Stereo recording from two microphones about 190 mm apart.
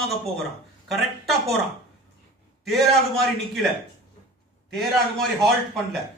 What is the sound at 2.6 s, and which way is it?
A man's voice, centre (ahead or behind).